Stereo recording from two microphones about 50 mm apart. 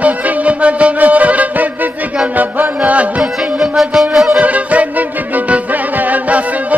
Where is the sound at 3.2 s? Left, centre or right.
Centre.